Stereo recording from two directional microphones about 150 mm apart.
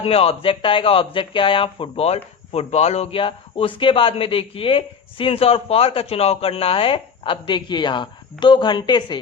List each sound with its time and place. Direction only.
0.0 s speech: 40° left (ahead or behind)